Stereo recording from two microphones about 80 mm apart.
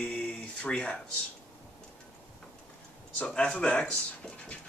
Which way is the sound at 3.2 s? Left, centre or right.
Centre.